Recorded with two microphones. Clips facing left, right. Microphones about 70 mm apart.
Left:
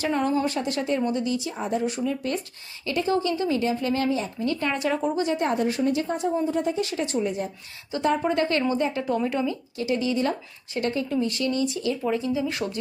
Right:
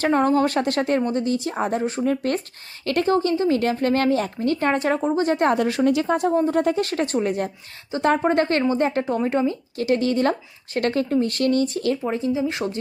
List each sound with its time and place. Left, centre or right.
0.0 s speech: right
0.4 s speech: right
1.0 s speech: right
1.8 s speech: right
2.0 s speech: right
3.1 s speech: right
3.6 s speech: right
5.4 s speech: right
8.2 s speech: right
9.0 s speech: right
9.7 s speech: right
10.8 s speech: right
11.1 s speech: right
12.0 s speech: right